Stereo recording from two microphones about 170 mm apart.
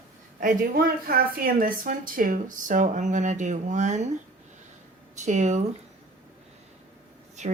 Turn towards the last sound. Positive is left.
turn(degrees=-45)  # may be behind; listen again after turning